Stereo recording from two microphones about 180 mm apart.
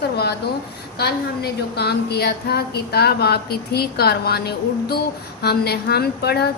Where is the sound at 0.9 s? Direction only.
60° left (ahead or behind).